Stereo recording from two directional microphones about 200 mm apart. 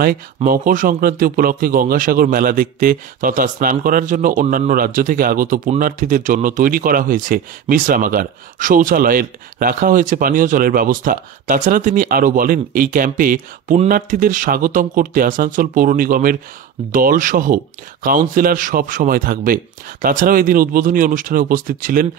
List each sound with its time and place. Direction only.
0.0 s speech: 45° right (ahead or behind)